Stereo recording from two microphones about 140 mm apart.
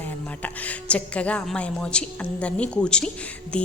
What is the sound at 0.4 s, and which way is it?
A woman's voice, 10° left (ahead or behind).